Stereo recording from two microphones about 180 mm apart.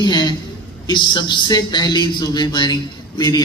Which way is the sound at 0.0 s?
25° left (ahead or behind).